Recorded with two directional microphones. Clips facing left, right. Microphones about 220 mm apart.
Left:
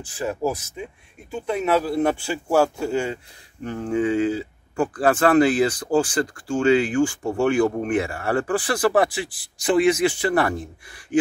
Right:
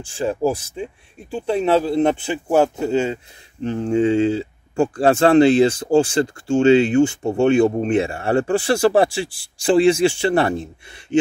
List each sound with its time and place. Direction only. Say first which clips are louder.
0.0 s speech: right 5 dB; 30° right (ahead or behind)